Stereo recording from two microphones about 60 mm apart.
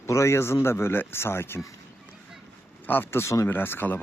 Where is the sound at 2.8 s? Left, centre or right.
Left.